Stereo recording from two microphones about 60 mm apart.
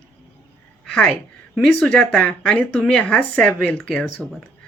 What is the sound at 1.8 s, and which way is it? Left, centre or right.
Speech, centre.